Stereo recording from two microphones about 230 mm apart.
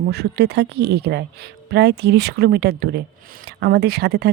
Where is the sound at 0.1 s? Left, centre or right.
Right.